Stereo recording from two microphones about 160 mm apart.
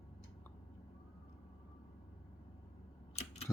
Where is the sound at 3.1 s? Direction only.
40° left (ahead or behind).